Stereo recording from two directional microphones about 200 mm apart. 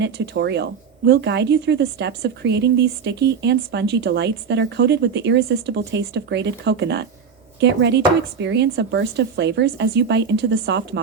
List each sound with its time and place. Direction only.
0.0 s a woman's voice: 60° right (ahead or behind)